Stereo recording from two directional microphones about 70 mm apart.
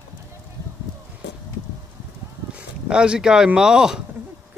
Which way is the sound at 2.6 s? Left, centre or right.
Centre.